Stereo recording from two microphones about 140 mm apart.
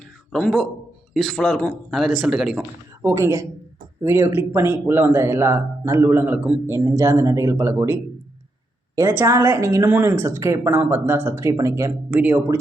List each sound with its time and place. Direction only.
0.3 s speech: 5° left (ahead or behind)
3.0 s a woman's voice: 20° right (ahead or behind)
9.0 s a woman's voice: 20° right (ahead or behind)